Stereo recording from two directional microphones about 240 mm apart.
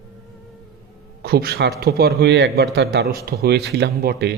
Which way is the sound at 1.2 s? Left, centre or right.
Right.